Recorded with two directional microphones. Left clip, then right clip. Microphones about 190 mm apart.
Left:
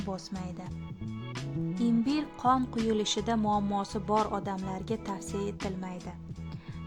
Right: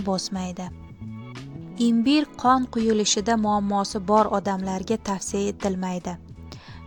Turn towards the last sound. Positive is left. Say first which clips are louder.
# right 11 dB
turn(degrees=-35)  # may be behind; listen again after turning